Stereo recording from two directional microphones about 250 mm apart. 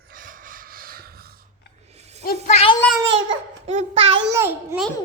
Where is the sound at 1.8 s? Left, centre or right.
Right.